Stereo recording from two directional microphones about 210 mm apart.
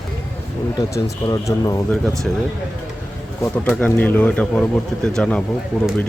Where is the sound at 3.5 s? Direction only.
5° left (ahead or behind).